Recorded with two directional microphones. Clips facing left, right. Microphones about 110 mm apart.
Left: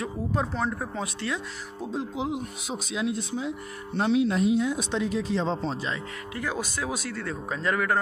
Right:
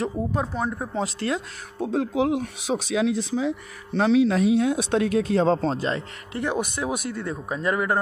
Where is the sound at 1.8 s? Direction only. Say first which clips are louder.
Right 8 dB; 75° right (ahead or behind); by 6.0 s 45° right (ahead or behind).